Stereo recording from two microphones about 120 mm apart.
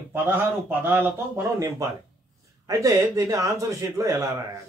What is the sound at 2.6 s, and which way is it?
A man's voice, 25° right (ahead or behind).